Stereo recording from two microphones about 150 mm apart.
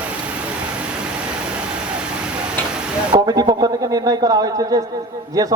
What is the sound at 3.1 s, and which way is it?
A man's voice, 25° right (ahead or behind).